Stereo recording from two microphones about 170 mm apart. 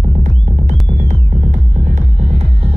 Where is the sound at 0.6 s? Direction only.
45° right (ahead or behind).